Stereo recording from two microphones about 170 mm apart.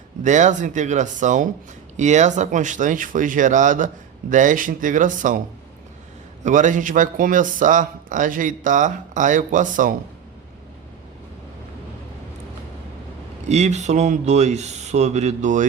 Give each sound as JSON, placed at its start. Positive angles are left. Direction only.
{"t": 0.2, "sound": "speech", "side_deg": -45}
{"t": 6.4, "sound": "speech", "side_deg": -45}
{"t": 13.5, "sound": "speech", "side_deg": -40}